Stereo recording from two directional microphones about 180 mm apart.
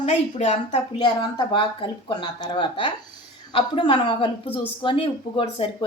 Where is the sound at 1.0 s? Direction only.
25° left (ahead or behind).